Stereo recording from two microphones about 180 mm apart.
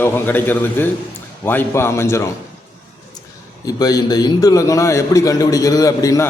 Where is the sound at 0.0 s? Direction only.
10° left (ahead or behind).